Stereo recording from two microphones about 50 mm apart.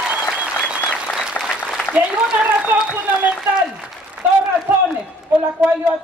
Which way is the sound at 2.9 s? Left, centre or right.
Right.